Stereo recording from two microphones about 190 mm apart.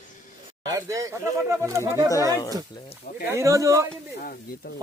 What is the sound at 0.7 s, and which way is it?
Speech, 15° right (ahead or behind).